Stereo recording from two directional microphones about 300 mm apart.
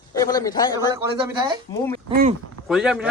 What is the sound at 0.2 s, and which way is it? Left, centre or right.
Speech, centre.